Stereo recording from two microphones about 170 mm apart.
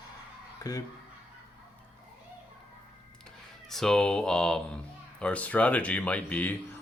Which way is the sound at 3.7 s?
5° left (ahead or behind).